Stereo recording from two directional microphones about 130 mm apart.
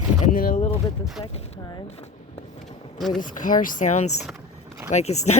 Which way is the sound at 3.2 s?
85° left.